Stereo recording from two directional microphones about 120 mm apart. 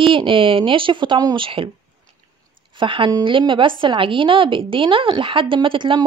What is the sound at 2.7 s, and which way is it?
A woman's voice, 45° right (ahead or behind).